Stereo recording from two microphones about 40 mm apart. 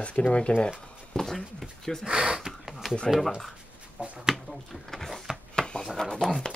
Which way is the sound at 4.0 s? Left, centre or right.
Right.